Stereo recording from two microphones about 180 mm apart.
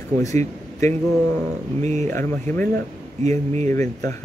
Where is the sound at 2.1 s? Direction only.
10° left (ahead or behind).